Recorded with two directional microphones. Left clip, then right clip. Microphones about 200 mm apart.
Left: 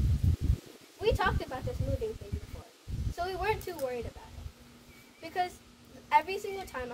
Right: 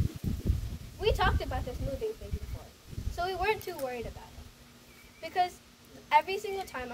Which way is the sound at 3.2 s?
15° right (ahead or behind).